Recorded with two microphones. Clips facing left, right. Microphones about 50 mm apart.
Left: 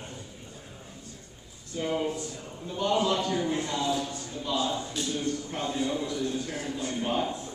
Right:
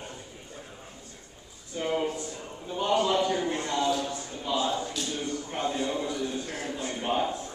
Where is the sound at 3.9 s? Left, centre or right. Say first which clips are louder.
Right 1 dB; right.